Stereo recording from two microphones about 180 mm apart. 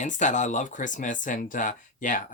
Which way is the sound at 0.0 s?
45° left (ahead or behind).